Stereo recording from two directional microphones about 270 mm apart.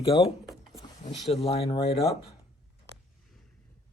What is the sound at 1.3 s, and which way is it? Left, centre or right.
Speech, left.